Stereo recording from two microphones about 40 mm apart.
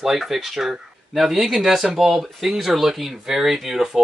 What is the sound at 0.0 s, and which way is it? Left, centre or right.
Speech, centre.